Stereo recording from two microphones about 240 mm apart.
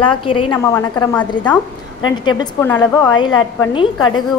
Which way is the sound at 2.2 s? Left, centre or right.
Centre.